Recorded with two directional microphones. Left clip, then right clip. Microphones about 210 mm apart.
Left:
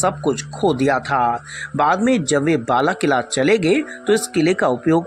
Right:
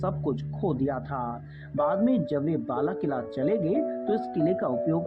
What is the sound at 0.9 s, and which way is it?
Speech, 35° left (ahead or behind).